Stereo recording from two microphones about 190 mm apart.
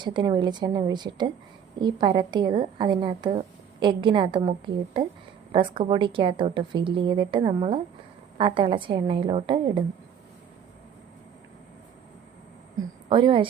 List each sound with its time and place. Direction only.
0.0 s a woman's voice: 25° right (ahead or behind)
12.7 s a woman's voice: 25° right (ahead or behind)